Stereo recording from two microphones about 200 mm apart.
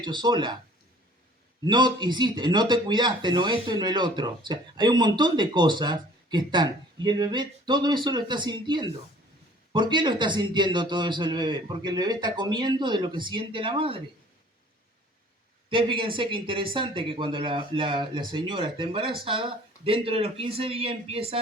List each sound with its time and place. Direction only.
0.0 s speech: 20° right (ahead or behind)
1.6 s speech: 20° right (ahead or behind)
15.7 s speech: 25° right (ahead or behind)